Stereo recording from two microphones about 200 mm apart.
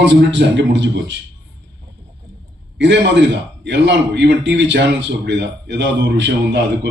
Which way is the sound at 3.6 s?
60° right (ahead or behind).